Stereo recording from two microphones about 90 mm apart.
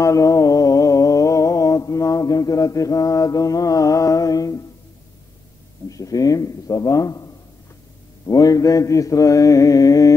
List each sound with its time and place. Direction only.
0.0 s a sound: 35° left (ahead or behind)
5.9 s mantra: 40° left (ahead or behind)
8.3 s mantra: 40° left (ahead or behind)